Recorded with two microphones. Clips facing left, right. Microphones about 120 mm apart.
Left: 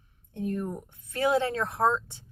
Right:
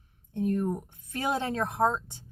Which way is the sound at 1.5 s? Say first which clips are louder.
Left 1 dB; 20° right (ahead or behind).